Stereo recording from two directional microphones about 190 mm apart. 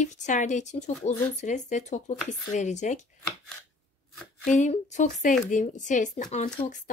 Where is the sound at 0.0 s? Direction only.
40° left (ahead or behind).